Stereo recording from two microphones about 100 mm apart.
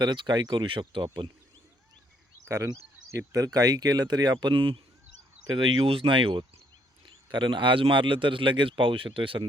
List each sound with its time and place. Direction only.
0.0 s speech: 45° right (ahead or behind)
2.5 s speech: 30° right (ahead or behind); by 9.4 s 60° right (ahead or behind)